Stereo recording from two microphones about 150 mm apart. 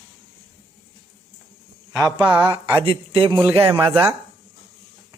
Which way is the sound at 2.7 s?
35° right (ahead or behind).